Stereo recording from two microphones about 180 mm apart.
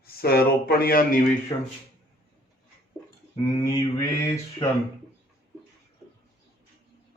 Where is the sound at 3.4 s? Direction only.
20° left (ahead or behind).